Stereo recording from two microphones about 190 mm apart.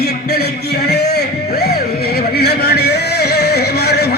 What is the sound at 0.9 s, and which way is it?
Music, 60° left (ahead or behind).